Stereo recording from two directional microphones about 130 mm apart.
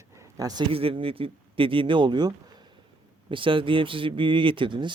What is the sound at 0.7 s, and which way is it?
Speech, 45° right (ahead or behind).